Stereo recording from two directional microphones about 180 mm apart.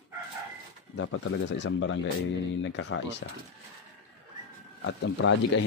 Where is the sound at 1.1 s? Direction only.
85° left.